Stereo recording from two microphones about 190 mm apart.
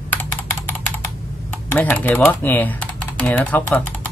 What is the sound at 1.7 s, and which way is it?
Speech, 10° left (ahead or behind).